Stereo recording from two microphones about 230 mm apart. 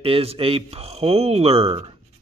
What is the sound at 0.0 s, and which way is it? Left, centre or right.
Speech, right.